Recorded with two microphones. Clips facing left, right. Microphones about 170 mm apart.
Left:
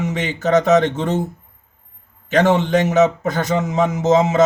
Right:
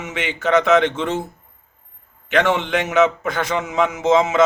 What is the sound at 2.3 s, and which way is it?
A man's voice, 40° left (ahead or behind).